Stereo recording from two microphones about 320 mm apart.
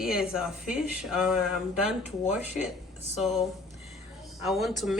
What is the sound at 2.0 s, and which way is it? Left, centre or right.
Speech, left.